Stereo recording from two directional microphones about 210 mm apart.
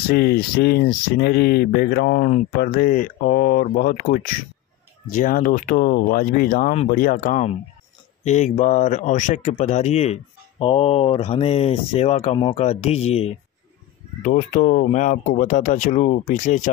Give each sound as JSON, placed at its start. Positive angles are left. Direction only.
{"t": 0.1, "sound": "speech", "side_deg": 45}